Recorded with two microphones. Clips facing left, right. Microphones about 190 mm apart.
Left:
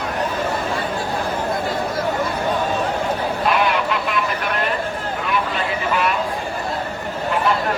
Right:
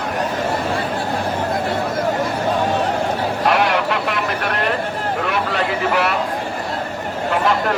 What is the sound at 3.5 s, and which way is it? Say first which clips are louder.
Goose: right 2 dB; 70° right (ahead or behind).